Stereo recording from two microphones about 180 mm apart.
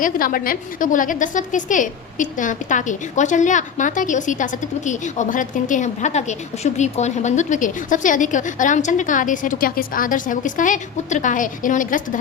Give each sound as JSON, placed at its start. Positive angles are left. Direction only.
{"t": 0.0, "sound": "a woman's voice", "side_deg": 50}